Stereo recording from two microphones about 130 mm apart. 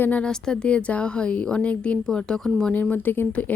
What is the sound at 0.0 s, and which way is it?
A woman's voice, 10° left (ahead or behind).